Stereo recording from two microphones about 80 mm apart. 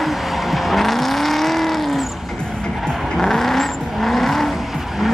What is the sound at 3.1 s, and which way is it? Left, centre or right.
Vehicle, centre.